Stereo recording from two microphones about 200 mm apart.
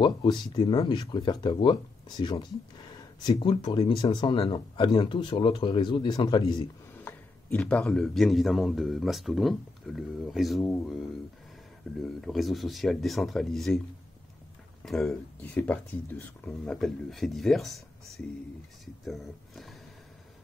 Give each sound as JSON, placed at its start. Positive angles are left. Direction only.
{"t": 0.0, "sound": "speech", "side_deg": 20}
{"t": 7.1, "sound": "a man's voice", "side_deg": 10}
{"t": 12.0, "sound": "a man's voice", "side_deg": 0}
{"t": 14.9, "sound": "a man's voice", "side_deg": 0}